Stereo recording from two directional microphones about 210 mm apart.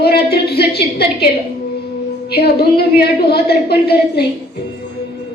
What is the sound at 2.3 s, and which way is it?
A woman's voice, 50° left (ahead or behind).